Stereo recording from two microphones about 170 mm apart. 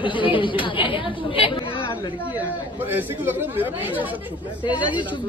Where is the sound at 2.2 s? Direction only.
10° right (ahead or behind).